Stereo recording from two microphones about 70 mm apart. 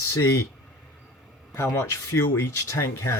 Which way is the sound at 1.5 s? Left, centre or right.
Left.